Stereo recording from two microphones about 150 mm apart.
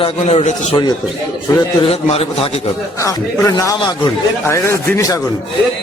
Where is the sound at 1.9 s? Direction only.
40° left (ahead or behind).